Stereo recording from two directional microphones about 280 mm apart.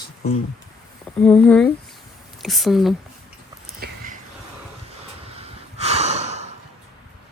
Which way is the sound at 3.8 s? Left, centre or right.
Right.